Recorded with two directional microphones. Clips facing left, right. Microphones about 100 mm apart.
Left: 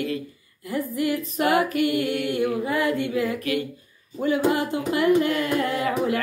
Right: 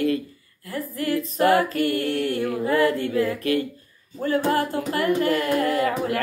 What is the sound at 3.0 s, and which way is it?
Speech, 35° right (ahead or behind).